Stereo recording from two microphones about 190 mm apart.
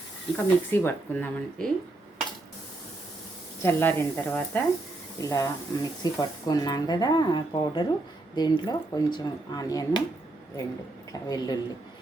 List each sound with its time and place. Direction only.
0.3 s speech: 10° left (ahead or behind)
3.6 s speech: 10° left (ahead or behind)
11.1 s speech: 20° left (ahead or behind)